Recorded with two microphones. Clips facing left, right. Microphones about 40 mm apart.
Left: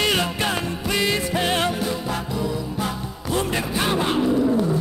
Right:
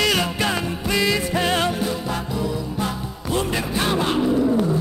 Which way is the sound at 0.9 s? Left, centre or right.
Left.